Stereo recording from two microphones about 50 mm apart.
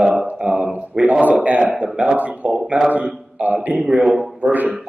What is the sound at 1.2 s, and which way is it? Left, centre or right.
Speech, right.